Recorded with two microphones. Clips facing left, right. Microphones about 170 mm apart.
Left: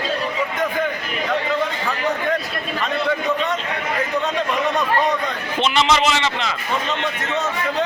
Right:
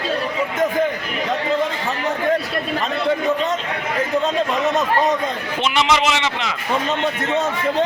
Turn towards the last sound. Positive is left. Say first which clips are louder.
# even
turn(degrees=-15)  # may be behind; listen again after turning